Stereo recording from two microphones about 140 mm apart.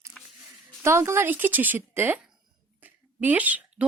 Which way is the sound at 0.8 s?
20° right (ahead or behind).